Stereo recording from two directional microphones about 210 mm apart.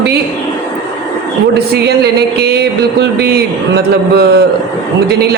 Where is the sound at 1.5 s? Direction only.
50° right (ahead or behind).